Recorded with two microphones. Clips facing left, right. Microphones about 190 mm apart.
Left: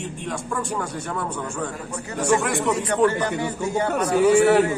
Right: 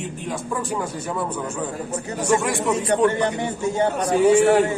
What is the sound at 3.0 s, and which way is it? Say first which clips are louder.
Speech: right 1 dB; 20° right (ahead or behind).